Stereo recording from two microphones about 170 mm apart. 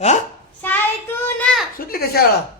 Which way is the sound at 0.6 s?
10° left (ahead or behind).